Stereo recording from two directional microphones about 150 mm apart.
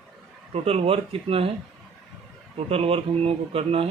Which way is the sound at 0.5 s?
40° right (ahead or behind).